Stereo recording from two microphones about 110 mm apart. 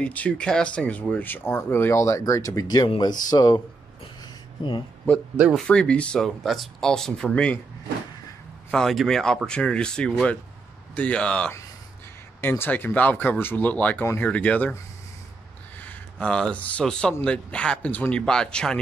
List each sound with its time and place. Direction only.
0.0 s speech: 10° left (ahead or behind); by 3.6 s 40° left (ahead or behind)
4.2 s a sound: 45° left (ahead or behind)
5.7 s speech: 10° left (ahead or behind)
8.7 s speech: 5° left (ahead or behind)
15.8 s speech: 10° left (ahead or behind)